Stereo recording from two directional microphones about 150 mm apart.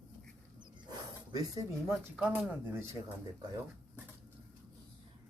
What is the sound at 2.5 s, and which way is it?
Speech, 15° right (ahead or behind).